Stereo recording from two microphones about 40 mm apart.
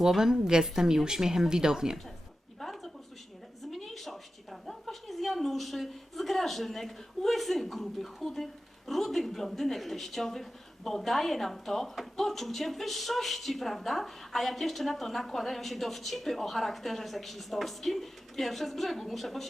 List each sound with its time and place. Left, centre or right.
0.1 s speech: centre
2.6 s a sound: centre
8.9 s speech: centre